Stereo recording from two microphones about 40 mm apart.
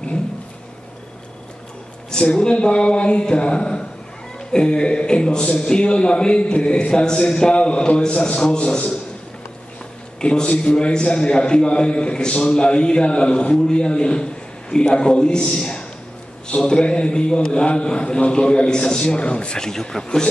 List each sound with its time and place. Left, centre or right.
2.0 s a man's voice: left
10.2 s a man's voice: left
19.7 s a man's voice: centre